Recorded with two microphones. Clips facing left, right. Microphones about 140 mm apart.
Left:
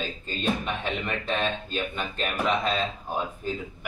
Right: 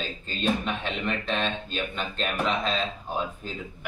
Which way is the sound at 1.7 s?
10° left (ahead or behind).